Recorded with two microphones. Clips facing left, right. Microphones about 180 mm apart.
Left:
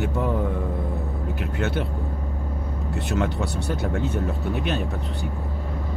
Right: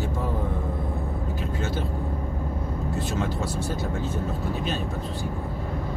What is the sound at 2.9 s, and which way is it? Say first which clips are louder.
Speech: left 4 dB; 65° left (ahead or behind).